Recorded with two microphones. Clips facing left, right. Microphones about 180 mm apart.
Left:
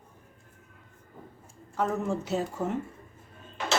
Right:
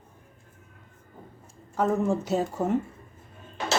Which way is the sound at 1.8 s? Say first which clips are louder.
Right 4 dB; 40° right (ahead or behind).